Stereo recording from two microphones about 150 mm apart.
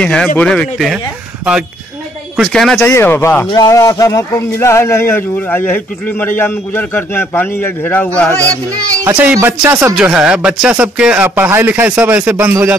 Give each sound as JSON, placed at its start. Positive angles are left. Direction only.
{"t": 0.0, "sound": "speech", "side_deg": 5}
{"t": 2.4, "sound": "speech", "side_deg": 5}
{"t": 2.9, "sound": "speech", "side_deg": 15}
{"t": 8.9, "sound": "speech", "side_deg": -20}